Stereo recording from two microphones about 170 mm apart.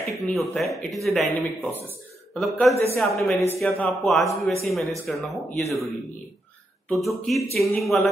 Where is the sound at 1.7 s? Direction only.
10° left (ahead or behind).